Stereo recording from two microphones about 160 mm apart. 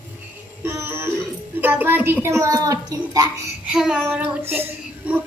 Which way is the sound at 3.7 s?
5° right (ahead or behind).